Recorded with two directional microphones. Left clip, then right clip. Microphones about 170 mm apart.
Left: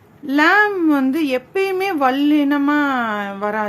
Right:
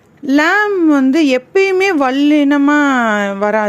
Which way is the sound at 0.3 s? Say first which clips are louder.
Right 2 dB; 40° right (ahead or behind).